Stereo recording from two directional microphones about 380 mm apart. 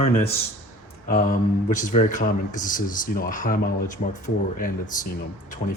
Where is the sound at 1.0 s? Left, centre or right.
Centre.